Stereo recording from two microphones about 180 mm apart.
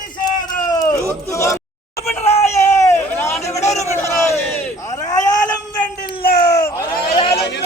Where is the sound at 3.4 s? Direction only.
35° left (ahead or behind).